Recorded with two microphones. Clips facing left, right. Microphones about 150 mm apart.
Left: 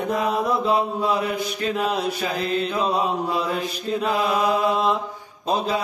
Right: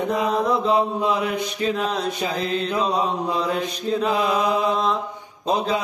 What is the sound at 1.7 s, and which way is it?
Mantra, 5° left (ahead or behind).